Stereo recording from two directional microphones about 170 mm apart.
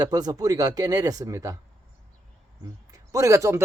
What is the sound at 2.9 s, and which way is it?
Speech, 20° right (ahead or behind).